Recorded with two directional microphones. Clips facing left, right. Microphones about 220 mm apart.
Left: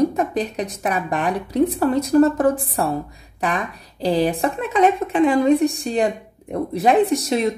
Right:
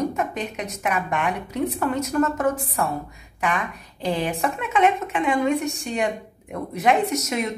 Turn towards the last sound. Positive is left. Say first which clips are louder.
# left 6 dB
turn(degrees=30)  # may be behind; listen again after turning